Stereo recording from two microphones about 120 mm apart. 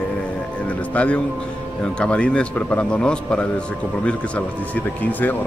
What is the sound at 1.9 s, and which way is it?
Speech, 10° left (ahead or behind).